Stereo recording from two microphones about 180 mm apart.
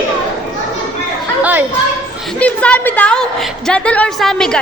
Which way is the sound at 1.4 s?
10° right (ahead or behind).